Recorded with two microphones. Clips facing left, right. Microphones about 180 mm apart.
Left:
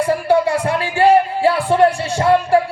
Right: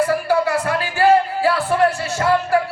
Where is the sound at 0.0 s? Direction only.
25° left (ahead or behind).